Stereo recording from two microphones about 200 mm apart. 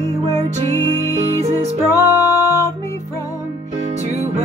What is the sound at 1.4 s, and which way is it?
Music, 30° right (ahead or behind).